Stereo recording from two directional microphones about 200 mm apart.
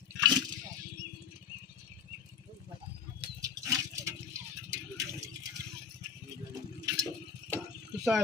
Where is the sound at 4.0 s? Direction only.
15° right (ahead or behind).